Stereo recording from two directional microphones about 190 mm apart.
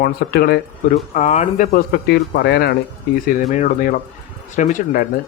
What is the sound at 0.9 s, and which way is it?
Speech, 40° left (ahead or behind).